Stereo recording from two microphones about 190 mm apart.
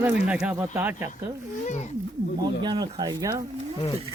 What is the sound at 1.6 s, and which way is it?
Speech, 40° left (ahead or behind).